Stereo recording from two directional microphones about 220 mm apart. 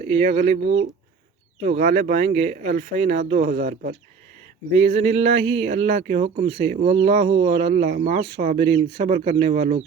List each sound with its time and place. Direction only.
0.0 s speech: 30° right (ahead or behind)